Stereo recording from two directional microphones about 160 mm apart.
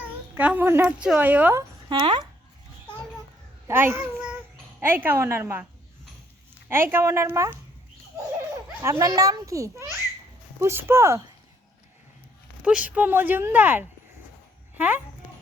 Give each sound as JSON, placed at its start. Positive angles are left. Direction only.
{"t": 0.0, "sound": "speech", "side_deg": -10}
{"t": 1.9, "sound": "speech", "side_deg": -30}
{"t": 3.7, "sound": "a child's voice", "side_deg": -15}
{"t": 6.9, "sound": "speech", "side_deg": -15}
{"t": 8.8, "sound": "a child's voice", "side_deg": -20}
{"t": 12.6, "sound": "speech", "side_deg": -10}